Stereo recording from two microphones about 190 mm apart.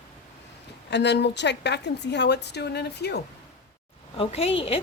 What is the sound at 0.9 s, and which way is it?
A woman's voice, 65° left (ahead or behind).